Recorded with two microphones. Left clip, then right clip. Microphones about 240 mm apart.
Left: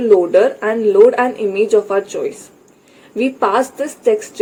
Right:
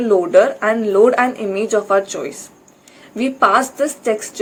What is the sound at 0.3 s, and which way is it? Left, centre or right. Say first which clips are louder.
Speech: right 1 dB; right.